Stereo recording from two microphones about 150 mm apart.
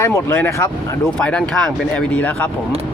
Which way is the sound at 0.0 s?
15° left (ahead or behind).